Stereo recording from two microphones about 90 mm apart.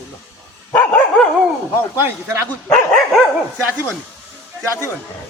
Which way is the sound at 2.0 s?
30° right (ahead or behind).